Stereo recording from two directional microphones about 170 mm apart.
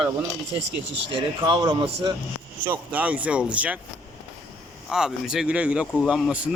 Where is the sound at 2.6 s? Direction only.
10° right (ahead or behind).